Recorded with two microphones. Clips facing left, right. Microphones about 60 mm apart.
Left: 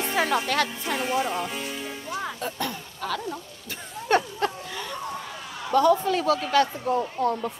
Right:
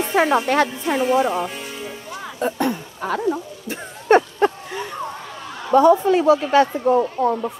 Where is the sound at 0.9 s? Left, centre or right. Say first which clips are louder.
Right 8 dB; centre.